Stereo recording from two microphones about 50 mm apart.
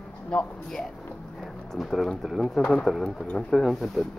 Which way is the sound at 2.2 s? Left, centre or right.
Centre.